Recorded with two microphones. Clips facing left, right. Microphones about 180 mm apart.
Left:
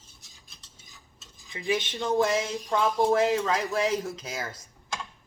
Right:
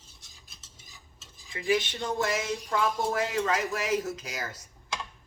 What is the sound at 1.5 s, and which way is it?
Speech, 25° left (ahead or behind).